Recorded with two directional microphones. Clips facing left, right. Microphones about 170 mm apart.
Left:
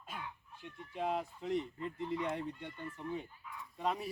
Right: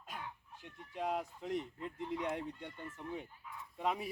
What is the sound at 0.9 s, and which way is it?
Speech, centre (ahead or behind).